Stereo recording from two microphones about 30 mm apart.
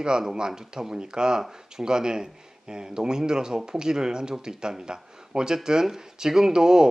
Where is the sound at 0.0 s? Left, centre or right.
Right.